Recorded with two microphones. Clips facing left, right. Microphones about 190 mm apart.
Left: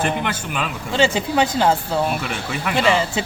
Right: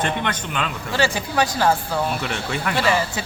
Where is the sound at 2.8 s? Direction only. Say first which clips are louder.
Left 4 dB; 20° left (ahead or behind).